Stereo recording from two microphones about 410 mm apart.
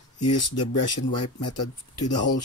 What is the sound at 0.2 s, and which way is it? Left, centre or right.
Speech, left.